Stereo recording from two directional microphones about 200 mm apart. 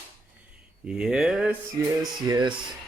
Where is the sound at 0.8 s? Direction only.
5° right (ahead or behind).